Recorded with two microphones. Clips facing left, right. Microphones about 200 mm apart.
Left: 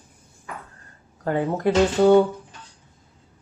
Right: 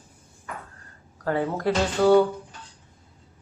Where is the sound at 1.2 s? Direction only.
20° left (ahead or behind).